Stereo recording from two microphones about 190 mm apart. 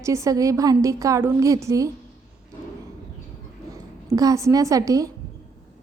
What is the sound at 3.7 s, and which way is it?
A woman's voice, 15° right (ahead or behind).